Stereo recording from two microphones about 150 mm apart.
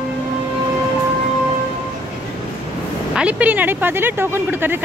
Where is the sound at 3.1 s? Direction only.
10° right (ahead or behind).